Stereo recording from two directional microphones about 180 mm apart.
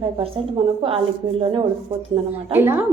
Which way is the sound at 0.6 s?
30° right (ahead or behind).